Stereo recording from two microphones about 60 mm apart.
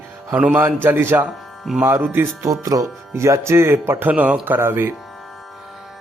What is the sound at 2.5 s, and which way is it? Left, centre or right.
Speech, right.